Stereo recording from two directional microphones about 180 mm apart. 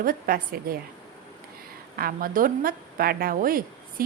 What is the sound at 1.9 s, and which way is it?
A woman's voice, 55° right (ahead or behind).